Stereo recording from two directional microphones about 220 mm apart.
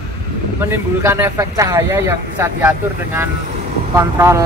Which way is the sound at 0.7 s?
10° right (ahead or behind).